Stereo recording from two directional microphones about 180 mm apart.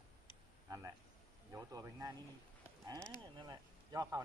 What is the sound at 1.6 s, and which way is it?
Speech, 20° right (ahead or behind).